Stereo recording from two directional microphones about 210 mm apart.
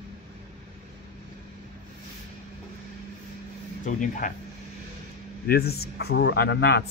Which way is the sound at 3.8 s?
35° left (ahead or behind).